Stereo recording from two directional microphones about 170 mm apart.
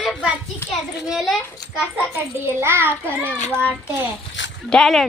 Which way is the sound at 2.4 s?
15° right (ahead or behind).